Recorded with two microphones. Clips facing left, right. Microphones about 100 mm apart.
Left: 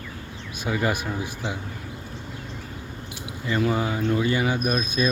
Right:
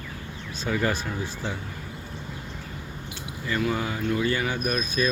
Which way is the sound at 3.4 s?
25° left (ahead or behind).